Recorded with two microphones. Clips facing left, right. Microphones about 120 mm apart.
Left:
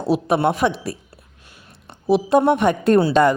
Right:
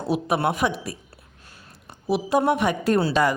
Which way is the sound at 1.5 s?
40° right (ahead or behind).